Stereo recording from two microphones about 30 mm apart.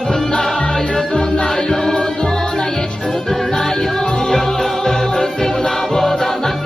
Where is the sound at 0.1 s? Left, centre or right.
Left.